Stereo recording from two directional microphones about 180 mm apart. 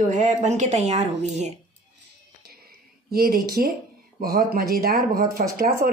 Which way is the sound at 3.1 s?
55° right (ahead or behind).